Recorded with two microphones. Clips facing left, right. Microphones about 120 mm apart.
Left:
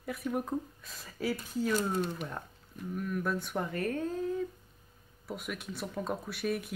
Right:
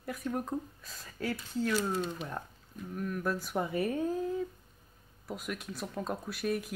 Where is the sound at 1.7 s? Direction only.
45° left (ahead or behind).